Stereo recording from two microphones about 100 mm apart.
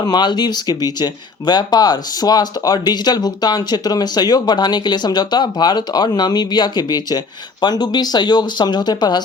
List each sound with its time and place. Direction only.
0.0 s speech: 45° left (ahead or behind)